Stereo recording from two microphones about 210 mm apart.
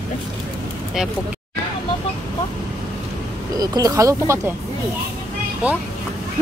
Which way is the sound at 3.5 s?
20° right (ahead or behind).